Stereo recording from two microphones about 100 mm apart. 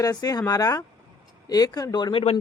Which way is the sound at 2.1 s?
90° left.